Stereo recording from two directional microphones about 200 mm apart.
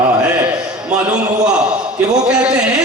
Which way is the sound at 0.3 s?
10° right (ahead or behind).